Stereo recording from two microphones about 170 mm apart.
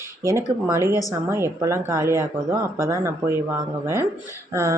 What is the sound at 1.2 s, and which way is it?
Speech, 15° right (ahead or behind).